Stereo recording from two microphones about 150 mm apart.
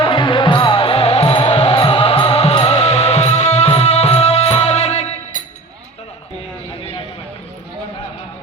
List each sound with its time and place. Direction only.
0.0 s music: 35° left (ahead or behind)